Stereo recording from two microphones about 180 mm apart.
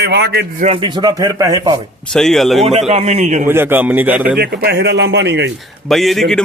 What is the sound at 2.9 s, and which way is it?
Speech, 35° right (ahead or behind).